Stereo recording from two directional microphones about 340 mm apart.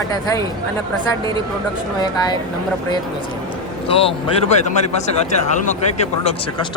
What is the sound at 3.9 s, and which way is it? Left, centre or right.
Speech, centre.